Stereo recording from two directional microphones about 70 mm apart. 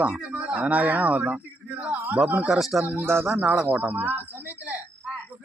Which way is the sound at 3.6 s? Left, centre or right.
Right.